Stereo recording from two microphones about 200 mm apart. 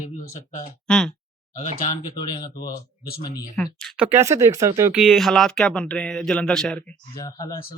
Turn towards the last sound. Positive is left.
turn(degrees=20)  # may be behind; listen again after turning